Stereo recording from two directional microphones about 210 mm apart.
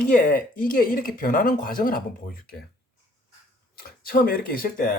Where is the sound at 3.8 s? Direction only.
45° left (ahead or behind).